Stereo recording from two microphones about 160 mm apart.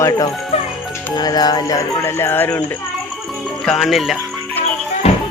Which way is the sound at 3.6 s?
Centre (ahead or behind).